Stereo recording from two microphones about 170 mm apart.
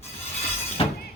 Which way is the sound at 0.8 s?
35° left (ahead or behind).